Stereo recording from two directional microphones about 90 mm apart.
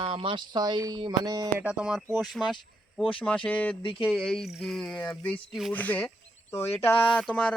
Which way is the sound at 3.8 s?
90° left.